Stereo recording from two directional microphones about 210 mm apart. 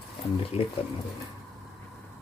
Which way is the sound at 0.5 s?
30° left (ahead or behind).